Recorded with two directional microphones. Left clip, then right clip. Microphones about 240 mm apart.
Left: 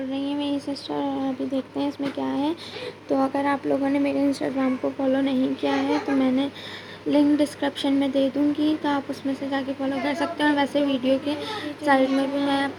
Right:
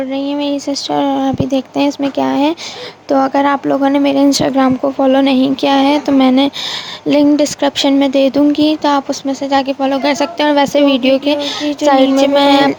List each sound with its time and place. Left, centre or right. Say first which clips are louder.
0.3 s speech: right 10 dB; right